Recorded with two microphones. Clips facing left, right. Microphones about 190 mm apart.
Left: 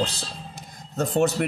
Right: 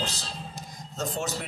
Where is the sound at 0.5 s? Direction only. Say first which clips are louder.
Left 9 dB; 60° left (ahead or behind).